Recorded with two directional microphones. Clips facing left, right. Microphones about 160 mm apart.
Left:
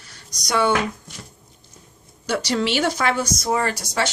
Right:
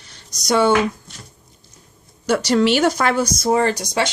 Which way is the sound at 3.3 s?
30° right (ahead or behind).